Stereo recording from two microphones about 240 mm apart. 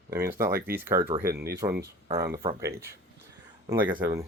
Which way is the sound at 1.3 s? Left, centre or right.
Right.